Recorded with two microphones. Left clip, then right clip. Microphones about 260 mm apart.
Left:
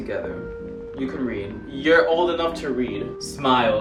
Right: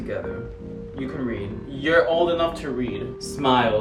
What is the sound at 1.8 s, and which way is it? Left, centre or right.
Speech, centre.